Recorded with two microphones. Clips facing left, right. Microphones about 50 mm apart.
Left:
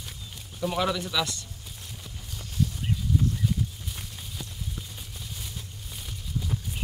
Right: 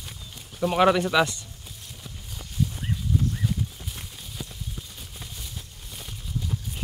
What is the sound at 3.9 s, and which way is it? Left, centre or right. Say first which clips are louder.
Clip-clop: even; centre.